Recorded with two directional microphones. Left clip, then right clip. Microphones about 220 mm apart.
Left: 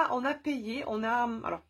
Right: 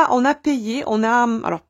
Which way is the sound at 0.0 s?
50° right (ahead or behind).